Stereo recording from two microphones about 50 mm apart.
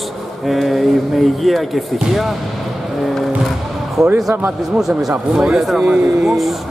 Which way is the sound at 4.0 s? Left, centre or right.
Centre.